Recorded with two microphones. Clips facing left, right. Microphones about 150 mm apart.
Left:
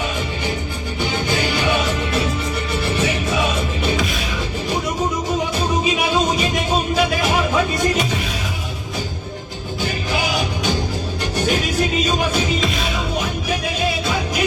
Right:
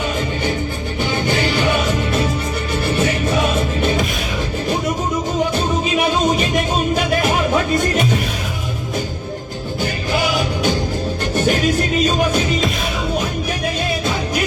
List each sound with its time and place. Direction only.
9.8 s music: 45° right (ahead or behind)